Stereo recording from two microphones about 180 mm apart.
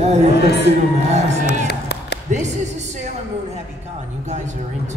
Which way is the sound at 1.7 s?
70° left (ahead or behind).